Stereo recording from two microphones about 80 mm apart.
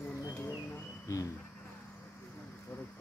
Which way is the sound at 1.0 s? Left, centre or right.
Left.